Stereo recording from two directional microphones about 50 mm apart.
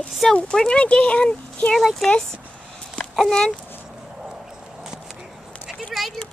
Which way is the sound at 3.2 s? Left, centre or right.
Centre.